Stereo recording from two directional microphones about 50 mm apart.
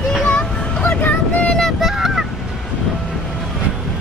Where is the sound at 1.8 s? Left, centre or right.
Centre.